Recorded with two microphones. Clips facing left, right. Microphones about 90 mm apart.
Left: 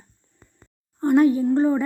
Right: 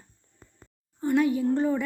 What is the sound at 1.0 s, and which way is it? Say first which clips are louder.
Speech: left 6 dB; 45° left (ahead or behind).